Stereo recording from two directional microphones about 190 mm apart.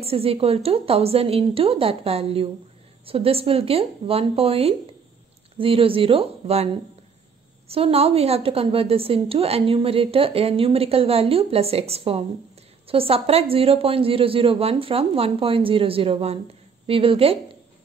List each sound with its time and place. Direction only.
0.0 s a woman's voice: 30° right (ahead or behind)